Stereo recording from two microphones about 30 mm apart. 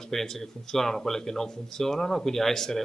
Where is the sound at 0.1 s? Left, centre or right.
Centre.